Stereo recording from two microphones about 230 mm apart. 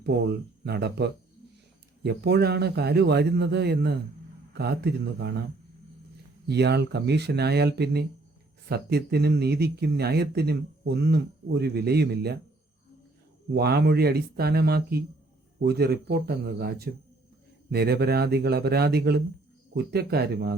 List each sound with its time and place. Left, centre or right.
0.0 s speech: right
6.5 s speech: right
13.5 s speech: right